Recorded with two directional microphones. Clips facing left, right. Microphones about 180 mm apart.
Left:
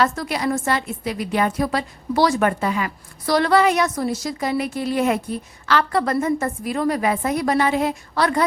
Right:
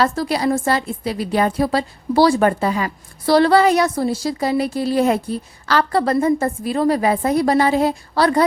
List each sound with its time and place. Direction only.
0.0 s a woman's voice: 35° right (ahead or behind)